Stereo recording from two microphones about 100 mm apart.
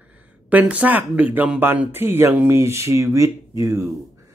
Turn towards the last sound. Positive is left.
turn(degrees=-30)  # may be behind; listen again after turning